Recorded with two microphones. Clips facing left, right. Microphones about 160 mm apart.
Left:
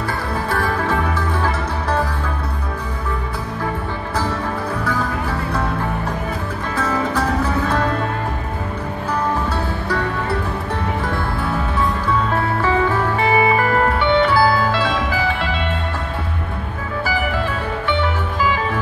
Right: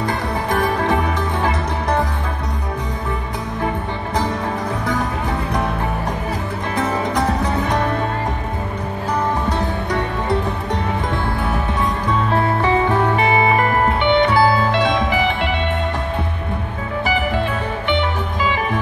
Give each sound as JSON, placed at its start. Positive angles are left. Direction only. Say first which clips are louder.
{"t": 0.0, "sound": "music", "louder": "right 2 dB", "side_deg": -20}
{"t": 6.8, "sound": "music", "louder": "even", "side_deg": -20}
{"t": 9.5, "sound": "music", "louder": "right 1 dB", "side_deg": -20}
{"t": 12.6, "sound": "music", "louder": "even", "side_deg": -20}
{"t": 17.0, "sound": "music", "louder": "right 2 dB", "side_deg": -20}